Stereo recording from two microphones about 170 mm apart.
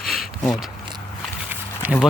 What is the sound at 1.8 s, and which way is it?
Speech, 5° right (ahead or behind).